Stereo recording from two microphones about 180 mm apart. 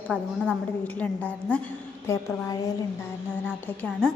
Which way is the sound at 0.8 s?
10° left (ahead or behind).